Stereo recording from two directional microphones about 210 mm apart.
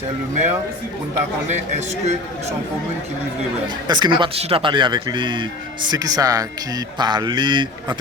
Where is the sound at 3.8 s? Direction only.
20° right (ahead or behind).